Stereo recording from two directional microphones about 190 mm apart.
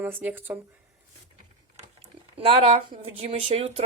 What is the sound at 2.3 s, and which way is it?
Speech, 30° right (ahead or behind).